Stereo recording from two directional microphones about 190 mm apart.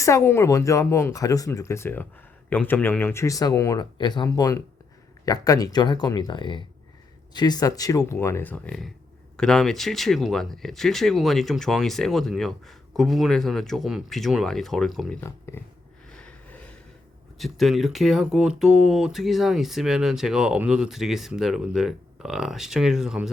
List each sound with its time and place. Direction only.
0.0 s speech: 15° left (ahead or behind)
15.2 s speech: 15° left (ahead or behind)
16.1 s a sound: 5° left (ahead or behind)
17.3 s speech: centre (ahead or behind)